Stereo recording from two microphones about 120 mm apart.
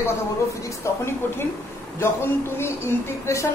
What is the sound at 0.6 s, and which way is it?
Speech, 20° left (ahead or behind).